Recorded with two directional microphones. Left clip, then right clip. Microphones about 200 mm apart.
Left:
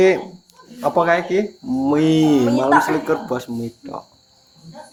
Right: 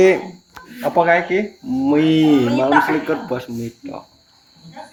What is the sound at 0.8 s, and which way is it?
Speech, 10° left (ahead or behind).